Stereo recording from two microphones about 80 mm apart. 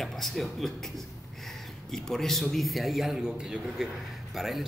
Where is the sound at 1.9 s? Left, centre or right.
Centre.